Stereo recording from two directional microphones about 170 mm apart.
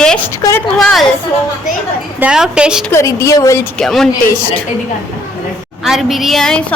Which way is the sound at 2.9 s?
15° left (ahead or behind).